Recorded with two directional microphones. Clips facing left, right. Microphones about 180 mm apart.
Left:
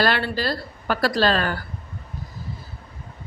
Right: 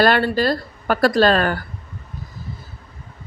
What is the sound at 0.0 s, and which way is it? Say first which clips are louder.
Speech: right 6 dB; 50° right (ahead or behind).